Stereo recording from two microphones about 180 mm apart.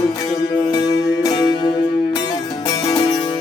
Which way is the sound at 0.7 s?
20° left (ahead or behind).